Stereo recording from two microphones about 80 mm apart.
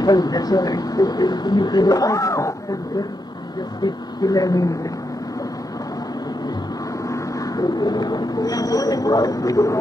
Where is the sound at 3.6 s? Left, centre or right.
Left.